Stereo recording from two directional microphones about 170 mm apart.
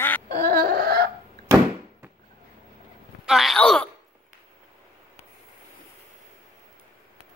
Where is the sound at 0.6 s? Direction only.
70° right (ahead or behind).